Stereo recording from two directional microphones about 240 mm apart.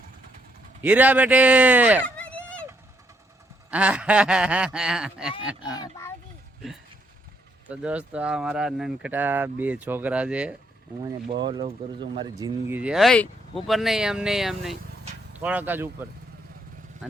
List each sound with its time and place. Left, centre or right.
0.8 s speech: centre
2.1 s a sound: centre
3.7 s speech: centre
5.7 s a sound: centre
7.7 s speech: centre
11.0 s speech: centre